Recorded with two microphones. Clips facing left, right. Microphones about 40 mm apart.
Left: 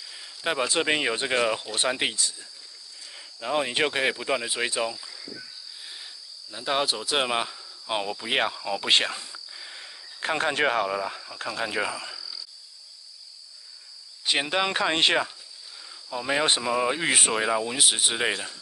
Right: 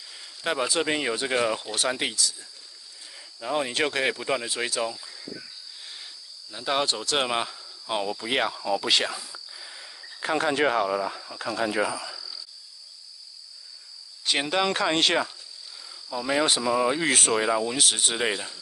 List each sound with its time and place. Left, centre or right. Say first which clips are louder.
0.0 s a sound: left 1 dB; centre
0.7 s speech: left 1 dB; left
3.3 s speech: left 1 dB; left
4.9 s cricket: left 1 dB; centre
6.5 s speech: even; centre
8.6 s speech: even; left
9.6 s cricket: left 1 dB; left
10.2 s speech: right 1 dB; left
14.2 s speech: even; centre